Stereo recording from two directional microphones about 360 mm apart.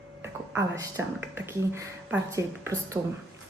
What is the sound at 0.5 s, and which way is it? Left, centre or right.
Speech, centre.